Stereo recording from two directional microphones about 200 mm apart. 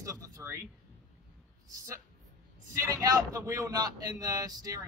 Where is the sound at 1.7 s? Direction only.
15° right (ahead or behind).